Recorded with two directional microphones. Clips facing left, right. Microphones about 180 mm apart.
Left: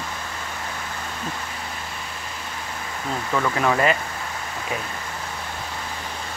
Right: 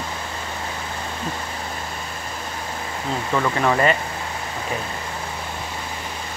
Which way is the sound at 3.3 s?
5° right (ahead or behind).